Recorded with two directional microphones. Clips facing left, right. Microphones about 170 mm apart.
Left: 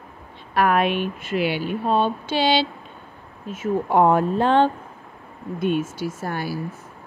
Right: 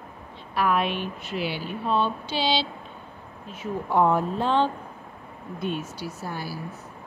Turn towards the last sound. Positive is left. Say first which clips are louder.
# left 6 dB
turn(degrees=70)  # may be behind; listen again after turning